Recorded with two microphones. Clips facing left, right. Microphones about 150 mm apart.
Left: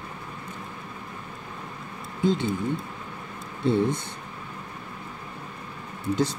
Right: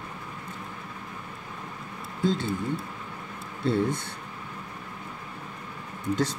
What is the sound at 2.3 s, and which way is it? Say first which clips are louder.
Speech: left 3 dB; 15° left (ahead or behind).